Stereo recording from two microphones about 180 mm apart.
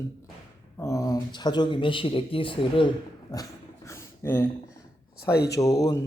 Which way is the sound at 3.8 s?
15° left (ahead or behind).